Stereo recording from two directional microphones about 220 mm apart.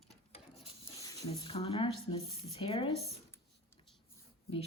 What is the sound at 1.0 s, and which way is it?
A woman's voice, 15° left (ahead or behind).